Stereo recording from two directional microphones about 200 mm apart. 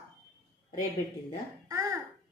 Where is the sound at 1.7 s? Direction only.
15° right (ahead or behind).